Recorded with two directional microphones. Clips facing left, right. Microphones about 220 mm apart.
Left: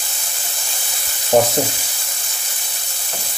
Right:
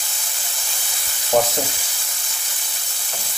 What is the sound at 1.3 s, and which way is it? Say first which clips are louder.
Frying: left 4 dB; 35° left (ahead or behind).